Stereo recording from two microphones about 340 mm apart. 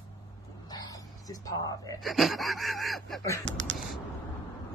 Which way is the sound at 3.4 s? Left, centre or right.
Right.